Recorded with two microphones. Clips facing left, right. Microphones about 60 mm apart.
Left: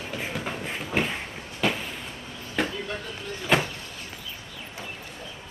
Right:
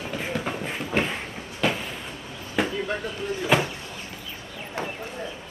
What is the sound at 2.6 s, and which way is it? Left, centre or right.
Vehicle, centre.